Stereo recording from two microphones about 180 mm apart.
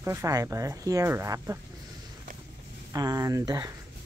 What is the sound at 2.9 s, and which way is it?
Speech, 20° right (ahead or behind).